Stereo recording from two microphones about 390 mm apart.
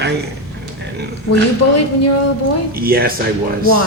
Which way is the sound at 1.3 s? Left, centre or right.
Left.